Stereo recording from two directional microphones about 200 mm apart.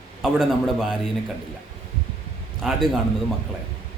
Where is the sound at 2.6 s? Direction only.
Centre (ahead or behind).